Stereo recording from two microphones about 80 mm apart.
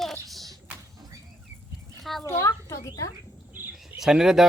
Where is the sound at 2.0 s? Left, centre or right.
Centre.